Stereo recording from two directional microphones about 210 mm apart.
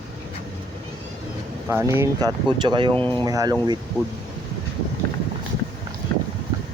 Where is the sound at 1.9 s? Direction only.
15° right (ahead or behind).